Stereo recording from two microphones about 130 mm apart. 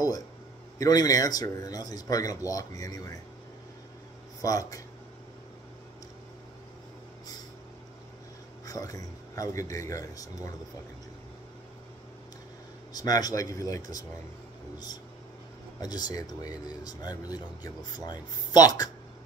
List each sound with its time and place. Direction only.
0.7 s a man's voice: 30° left (ahead or behind)
4.4 s a man's voice: 25° left (ahead or behind)
8.6 s a man's voice: 25° left (ahead or behind)
12.9 s a man's voice: 30° left (ahead or behind)
15.8 s a man's voice: 30° left (ahead or behind)